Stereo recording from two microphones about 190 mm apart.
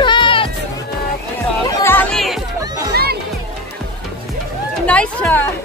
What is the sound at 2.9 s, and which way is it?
Music, 55° right (ahead or behind).